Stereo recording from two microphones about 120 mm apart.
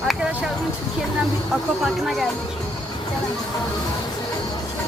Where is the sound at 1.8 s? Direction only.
Centre (ahead or behind).